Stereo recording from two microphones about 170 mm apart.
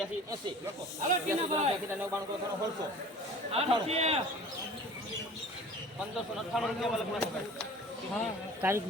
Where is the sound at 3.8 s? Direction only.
40° right (ahead or behind).